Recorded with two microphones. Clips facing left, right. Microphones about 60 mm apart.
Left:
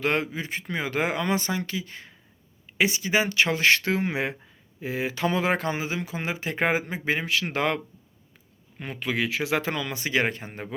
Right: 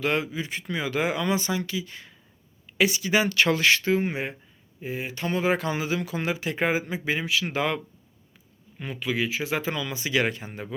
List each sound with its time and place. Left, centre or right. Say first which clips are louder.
0.0 s speech: even; left; by 3.6 s centre
3.6 s speech: left 1 dB; left
3.8 s speech: right 1 dB; left
5.5 s speech: right 1 dB; left
8.8 s speech: even; left
9.2 s speech: left 4 dB; left
10.2 s speech: even; left